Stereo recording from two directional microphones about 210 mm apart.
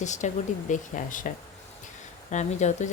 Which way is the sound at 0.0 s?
35° left (ahead or behind).